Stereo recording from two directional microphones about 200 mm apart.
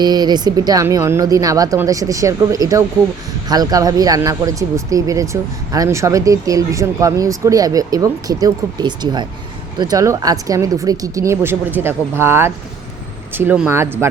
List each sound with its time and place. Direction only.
0.0 s speech: 20° right (ahead or behind)